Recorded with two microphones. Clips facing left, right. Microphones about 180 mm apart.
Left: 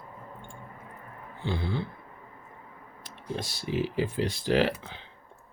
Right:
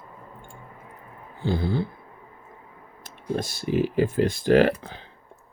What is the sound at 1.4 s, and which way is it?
Speech, 40° right (ahead or behind).